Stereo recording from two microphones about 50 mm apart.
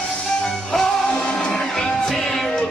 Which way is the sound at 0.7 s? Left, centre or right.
Centre.